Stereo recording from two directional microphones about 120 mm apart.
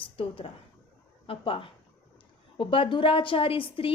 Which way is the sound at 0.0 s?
45° left (ahead or behind).